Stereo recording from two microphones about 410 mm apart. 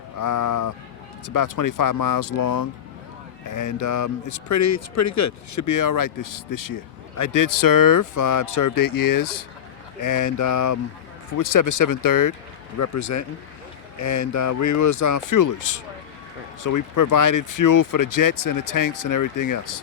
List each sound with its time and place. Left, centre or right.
0.2 s speech: left